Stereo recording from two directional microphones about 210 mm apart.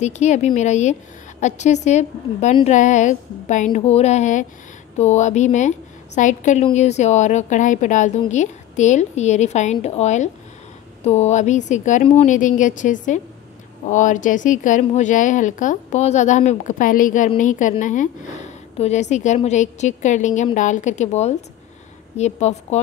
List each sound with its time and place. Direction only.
0.0 s a woman's voice: 35° left (ahead or behind)